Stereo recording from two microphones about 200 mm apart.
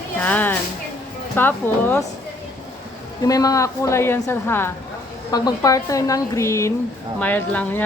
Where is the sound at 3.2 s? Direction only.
15° left (ahead or behind).